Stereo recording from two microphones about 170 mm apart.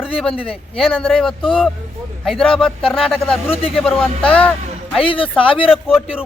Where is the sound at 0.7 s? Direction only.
Centre (ahead or behind).